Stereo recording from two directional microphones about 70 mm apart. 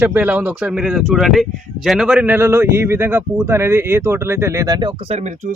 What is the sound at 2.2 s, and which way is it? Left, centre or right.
Speech, right.